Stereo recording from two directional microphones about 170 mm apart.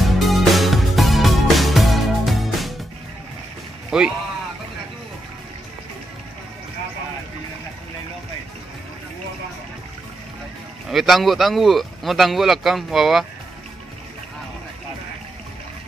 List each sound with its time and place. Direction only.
0.0 s music: centre (ahead or behind)
3.9 s speech: 5° right (ahead or behind)
10.9 s speech: centre (ahead or behind)